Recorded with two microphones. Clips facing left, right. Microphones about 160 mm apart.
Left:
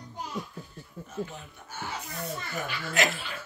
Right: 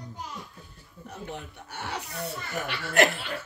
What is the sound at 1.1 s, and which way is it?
Speech, 70° right (ahead or behind).